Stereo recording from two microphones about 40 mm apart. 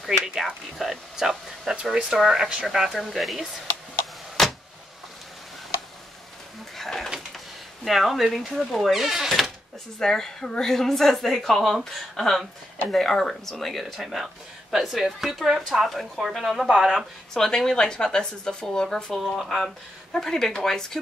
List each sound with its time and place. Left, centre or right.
0.0 s a sound: centre
0.7 s speech: centre
2.9 s a woman's voice: centre
4.4 s a sound: centre
6.8 s pigeon: centre
7.3 s speech: centre
9.9 s a woman's voice: centre
14.0 s a woman's voice: centre
17.3 s a woman's voice: centre
19.3 s a woman's voice: centre